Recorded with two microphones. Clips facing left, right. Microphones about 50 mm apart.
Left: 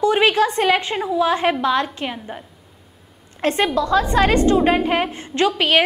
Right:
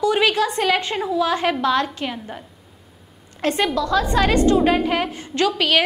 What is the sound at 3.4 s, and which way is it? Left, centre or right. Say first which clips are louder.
A woman's voice: left 2 dB; left.